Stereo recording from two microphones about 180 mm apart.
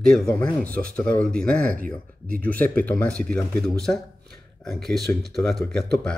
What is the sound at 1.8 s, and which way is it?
Speech, 50° right (ahead or behind).